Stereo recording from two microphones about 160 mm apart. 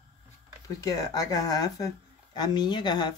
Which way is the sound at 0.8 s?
20° left (ahead or behind).